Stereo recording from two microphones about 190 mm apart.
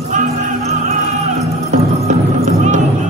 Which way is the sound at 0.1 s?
40° right (ahead or behind).